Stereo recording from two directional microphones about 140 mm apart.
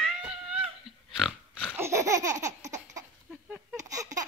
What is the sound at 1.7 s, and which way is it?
Laughter, 20° right (ahead or behind).